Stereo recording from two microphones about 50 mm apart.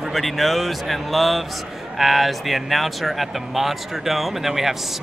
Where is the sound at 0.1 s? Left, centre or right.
Centre.